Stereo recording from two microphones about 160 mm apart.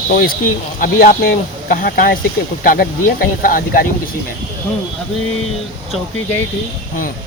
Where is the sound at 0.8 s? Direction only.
60° left (ahead or behind).